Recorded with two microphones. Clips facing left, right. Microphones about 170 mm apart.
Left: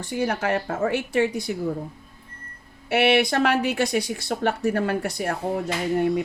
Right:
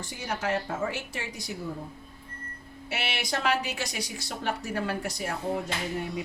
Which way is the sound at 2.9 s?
60° left (ahead or behind).